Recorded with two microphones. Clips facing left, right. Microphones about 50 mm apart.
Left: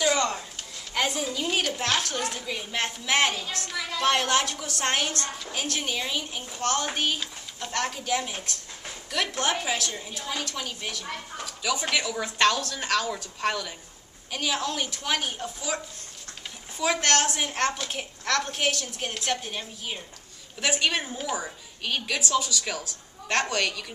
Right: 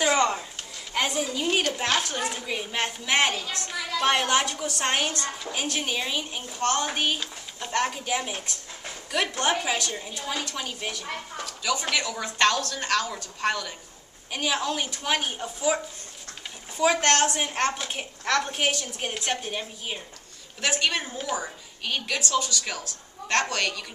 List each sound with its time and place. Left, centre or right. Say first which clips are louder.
0.0 s a sound: right 2 dB; right
0.9 s a sound: right 1 dB; centre
1.7 s a woman's voice: right 1 dB; centre
11.4 s a woman's voice: even; centre
20.6 s a woman's voice: even; centre
22.4 s a woman's voice: even; centre